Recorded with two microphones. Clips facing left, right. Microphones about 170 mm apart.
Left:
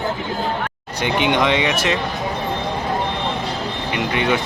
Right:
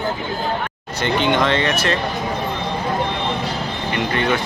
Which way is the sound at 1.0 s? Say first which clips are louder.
Even; 15° left (ahead or behind).